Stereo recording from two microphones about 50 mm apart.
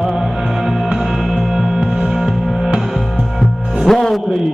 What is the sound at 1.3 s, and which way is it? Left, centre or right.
Music, centre.